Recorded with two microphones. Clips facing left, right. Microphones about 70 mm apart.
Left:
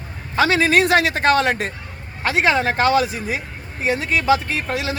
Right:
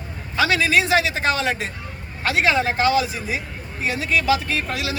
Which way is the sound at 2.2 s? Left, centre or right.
Left.